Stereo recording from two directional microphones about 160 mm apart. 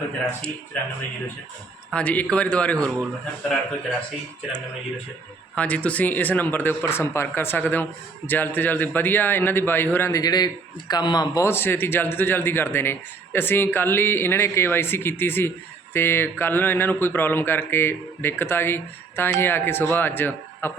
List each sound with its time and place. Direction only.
0.3 s a man's voice: 5° left (ahead or behind)
1.9 s a man's voice: 10° left (ahead or behind)
5.5 s a man's voice: 10° left (ahead or behind)